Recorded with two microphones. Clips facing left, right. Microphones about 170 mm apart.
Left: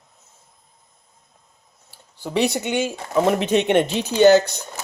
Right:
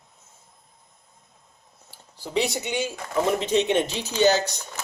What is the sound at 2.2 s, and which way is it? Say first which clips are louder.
Speech: left 4 dB; 60° left (ahead or behind).